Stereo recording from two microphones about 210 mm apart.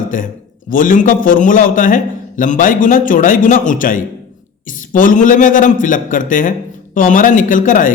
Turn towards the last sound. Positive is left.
turn(degrees=40)  # may be behind; listen again after turning